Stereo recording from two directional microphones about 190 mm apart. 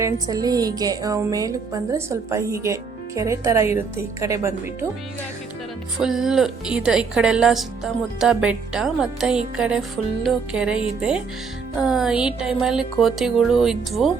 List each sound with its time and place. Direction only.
0.0 s music: 20° right (ahead or behind)
3.2 s speech: 15° right (ahead or behind)
6.0 s speech: centre (ahead or behind)
11.8 s speech: 5° right (ahead or behind)